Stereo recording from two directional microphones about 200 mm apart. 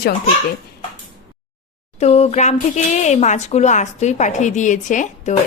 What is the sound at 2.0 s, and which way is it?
Speech, 35° left (ahead or behind).